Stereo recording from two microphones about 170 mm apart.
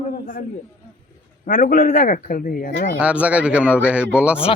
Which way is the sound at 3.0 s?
5° right (ahead or behind).